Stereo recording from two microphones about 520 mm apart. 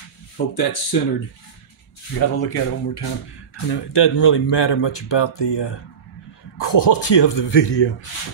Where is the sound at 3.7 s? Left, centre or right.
Left.